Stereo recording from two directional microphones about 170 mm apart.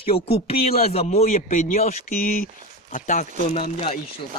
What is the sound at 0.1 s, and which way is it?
A man's voice, 35° left (ahead or behind).